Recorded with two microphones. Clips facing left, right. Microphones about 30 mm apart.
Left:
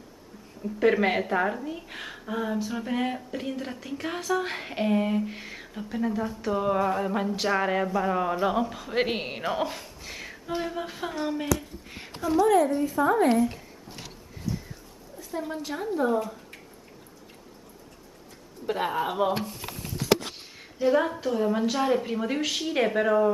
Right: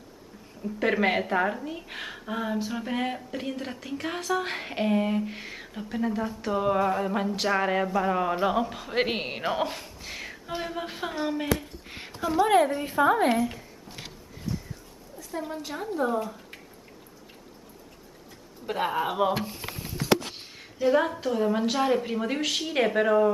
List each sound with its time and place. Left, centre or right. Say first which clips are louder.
0.6 s a woman's voice: left 3 dB; centre
11.4 s a sound: even; right
12.4 s a woman's voice: even; right
13.4 s a sound: left 3 dB; centre
15.3 s a woman's voice: left 1 dB; centre
18.7 s a woman's voice: even; centre
20.3 s a woman's voice: even; centre